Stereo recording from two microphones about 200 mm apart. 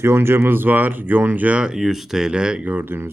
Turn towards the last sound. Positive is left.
turn(degrees=-10)  # may be behind; listen again after turning